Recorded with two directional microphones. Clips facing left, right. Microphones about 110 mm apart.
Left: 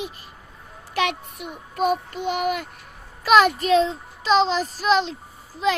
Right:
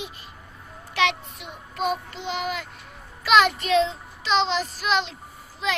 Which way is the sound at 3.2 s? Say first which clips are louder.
Left 3 dB; 40° left (ahead or behind).